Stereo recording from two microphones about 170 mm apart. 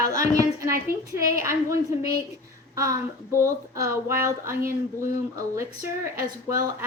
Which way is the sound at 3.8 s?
15° right (ahead or behind).